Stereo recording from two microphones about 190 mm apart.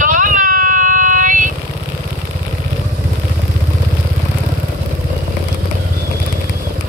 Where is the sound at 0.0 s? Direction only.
45° right (ahead or behind).